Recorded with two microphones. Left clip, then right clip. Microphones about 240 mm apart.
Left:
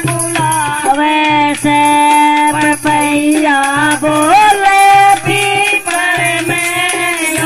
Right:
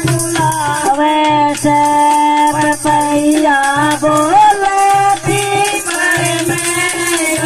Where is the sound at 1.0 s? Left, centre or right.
Left.